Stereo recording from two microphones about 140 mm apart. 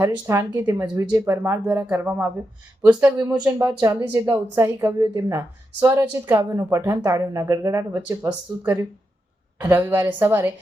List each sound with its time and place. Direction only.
0.0 s speech: 20° right (ahead or behind)
4.1 s speech: 25° right (ahead or behind)